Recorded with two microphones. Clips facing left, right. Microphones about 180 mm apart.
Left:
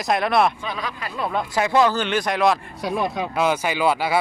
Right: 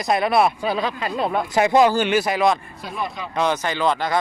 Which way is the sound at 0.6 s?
30° right (ahead or behind).